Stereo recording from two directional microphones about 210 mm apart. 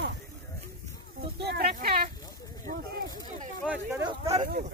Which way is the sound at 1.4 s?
50° right (ahead or behind).